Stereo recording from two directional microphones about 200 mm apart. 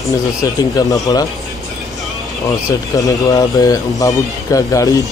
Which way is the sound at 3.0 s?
20° left (ahead or behind).